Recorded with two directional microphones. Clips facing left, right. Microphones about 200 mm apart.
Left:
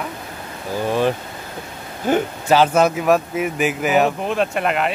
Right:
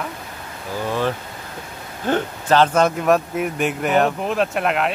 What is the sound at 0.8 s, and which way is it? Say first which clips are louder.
Speech: left 4 dB; 15° left (ahead or behind).